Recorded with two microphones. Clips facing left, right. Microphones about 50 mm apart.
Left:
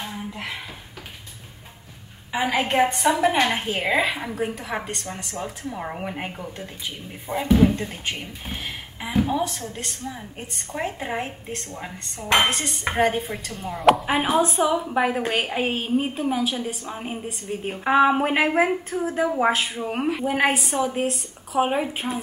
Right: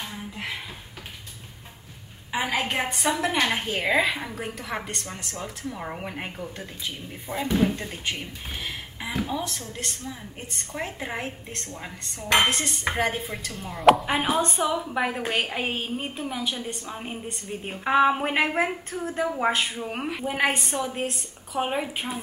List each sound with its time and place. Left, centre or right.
2.5 s a woman's voice: centre
2.8 s a woman's voice: centre
5.3 s a woman's voice: centre